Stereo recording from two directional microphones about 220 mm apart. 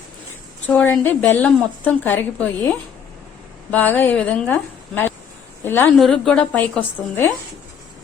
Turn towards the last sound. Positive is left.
turn(degrees=10)  # may be behind; listen again after turning